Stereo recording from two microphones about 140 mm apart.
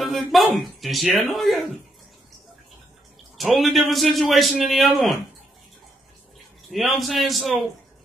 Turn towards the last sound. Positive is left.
turn(degrees=0)  # may be behind; listen again after turning